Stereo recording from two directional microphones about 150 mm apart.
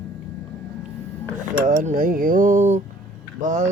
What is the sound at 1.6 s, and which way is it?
Speech, 65° right (ahead or behind).